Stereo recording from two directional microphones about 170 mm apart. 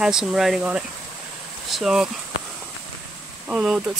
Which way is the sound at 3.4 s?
5° right (ahead or behind).